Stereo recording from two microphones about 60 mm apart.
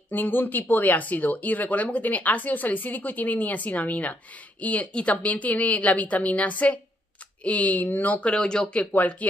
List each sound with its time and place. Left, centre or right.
0.1 s speech: left; by 8.8 s centre
8.9 s speech: left